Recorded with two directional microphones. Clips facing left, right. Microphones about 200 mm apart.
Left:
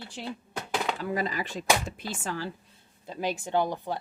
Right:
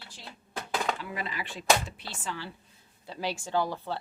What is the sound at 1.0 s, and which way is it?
Speech, 40° left (ahead or behind).